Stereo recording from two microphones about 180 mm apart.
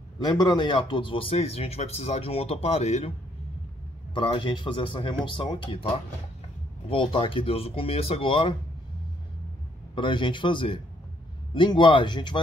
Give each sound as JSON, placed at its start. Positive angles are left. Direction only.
{"t": 0.2, "sound": "speech", "side_deg": 20}
{"t": 4.1, "sound": "speech", "side_deg": 25}
{"t": 9.9, "sound": "speech", "side_deg": 25}